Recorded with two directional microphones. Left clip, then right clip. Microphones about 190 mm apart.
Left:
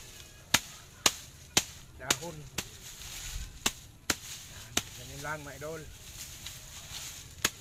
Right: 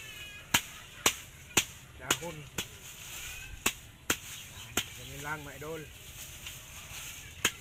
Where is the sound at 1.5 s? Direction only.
15° left (ahead or behind).